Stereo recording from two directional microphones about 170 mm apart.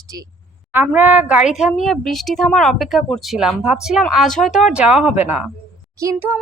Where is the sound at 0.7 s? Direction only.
10° right (ahead or behind).